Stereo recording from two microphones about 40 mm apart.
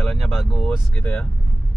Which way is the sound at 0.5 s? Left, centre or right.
Left.